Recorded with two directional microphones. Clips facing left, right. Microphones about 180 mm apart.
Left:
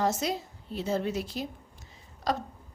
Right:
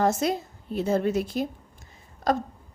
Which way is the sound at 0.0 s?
55° right (ahead or behind).